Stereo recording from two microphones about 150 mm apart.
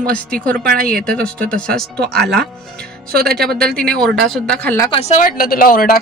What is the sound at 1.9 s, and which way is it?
Speech, 90° right.